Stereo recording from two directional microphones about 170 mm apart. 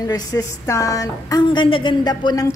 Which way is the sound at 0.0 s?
20° left (ahead or behind).